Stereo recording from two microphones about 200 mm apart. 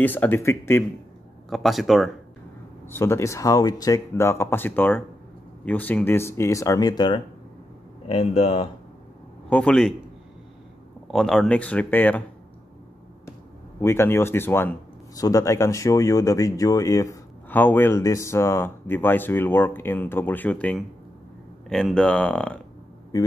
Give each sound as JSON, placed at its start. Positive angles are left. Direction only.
{"t": 0.0, "sound": "speech", "side_deg": 10}
{"t": 1.5, "sound": "speech", "side_deg": 0}
{"t": 2.9, "sound": "speech", "side_deg": 15}
{"t": 9.5, "sound": "speech", "side_deg": 5}
{"t": 11.1, "sound": "speech", "side_deg": 0}
{"t": 13.7, "sound": "speech", "side_deg": 10}